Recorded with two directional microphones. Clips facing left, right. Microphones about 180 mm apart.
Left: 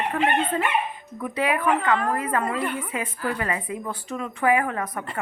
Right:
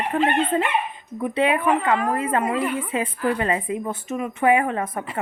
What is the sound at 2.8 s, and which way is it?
A woman's voice, 25° right (ahead or behind).